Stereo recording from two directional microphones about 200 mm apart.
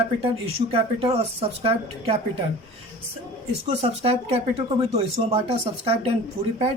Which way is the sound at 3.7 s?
30° right (ahead or behind).